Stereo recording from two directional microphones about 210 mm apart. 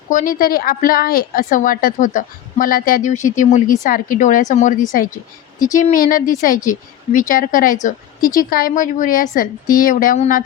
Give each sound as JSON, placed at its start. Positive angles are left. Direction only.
{"t": 0.1, "sound": "a woman's voice", "side_deg": 40}